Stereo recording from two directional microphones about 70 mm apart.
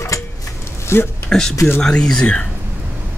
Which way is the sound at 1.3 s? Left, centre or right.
Centre.